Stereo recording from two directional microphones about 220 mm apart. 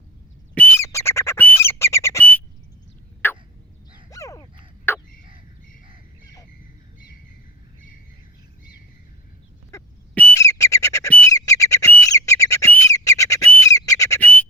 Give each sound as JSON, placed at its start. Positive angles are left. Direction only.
{"t": 0.5, "sound": "bird", "side_deg": 10}
{"t": 3.2, "sound": "fowl", "side_deg": 10}
{"t": 4.1, "sound": "quack", "side_deg": 15}
{"t": 4.9, "sound": "a sound", "side_deg": 10}
{"t": 9.7, "sound": "squawk", "side_deg": 10}